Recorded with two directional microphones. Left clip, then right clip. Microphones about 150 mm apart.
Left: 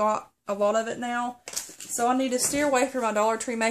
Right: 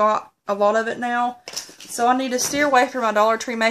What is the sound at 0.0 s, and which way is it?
Speech, centre (ahead or behind).